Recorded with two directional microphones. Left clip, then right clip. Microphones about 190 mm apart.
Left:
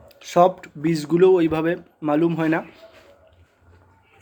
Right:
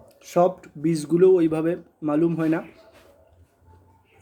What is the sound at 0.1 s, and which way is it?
Speech, 10° right (ahead or behind).